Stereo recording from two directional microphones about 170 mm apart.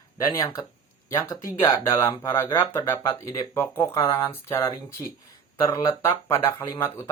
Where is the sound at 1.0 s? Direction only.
15° left (ahead or behind).